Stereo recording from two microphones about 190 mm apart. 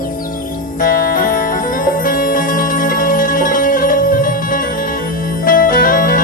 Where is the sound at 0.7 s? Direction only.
45° left (ahead or behind).